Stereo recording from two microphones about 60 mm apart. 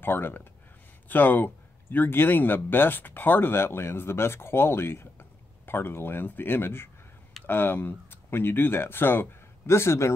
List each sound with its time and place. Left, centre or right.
0.0 s speech: left